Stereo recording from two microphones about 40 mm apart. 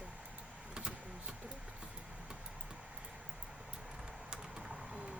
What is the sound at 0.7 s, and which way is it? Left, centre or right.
Vehicle, right.